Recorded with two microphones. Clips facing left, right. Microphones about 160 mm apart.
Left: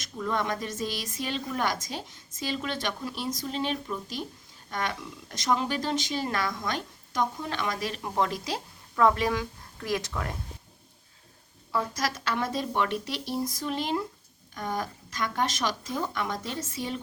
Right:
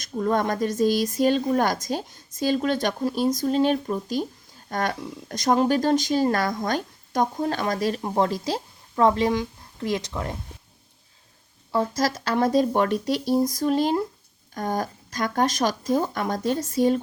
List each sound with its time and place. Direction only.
0.0 s speech: 45° right (ahead or behind); by 10.3 s 20° right (ahead or behind)
11.7 s speech: 30° right (ahead or behind)